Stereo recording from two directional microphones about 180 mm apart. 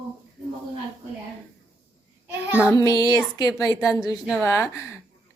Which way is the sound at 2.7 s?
20° left (ahead or behind).